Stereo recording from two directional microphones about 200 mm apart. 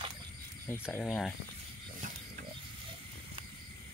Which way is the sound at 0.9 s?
Centre (ahead or behind).